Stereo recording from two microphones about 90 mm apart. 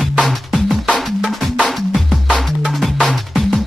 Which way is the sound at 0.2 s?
Centre (ahead or behind).